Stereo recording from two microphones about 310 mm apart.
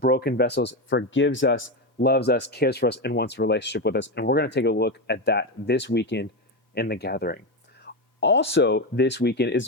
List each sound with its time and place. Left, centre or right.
0.0 s speech: left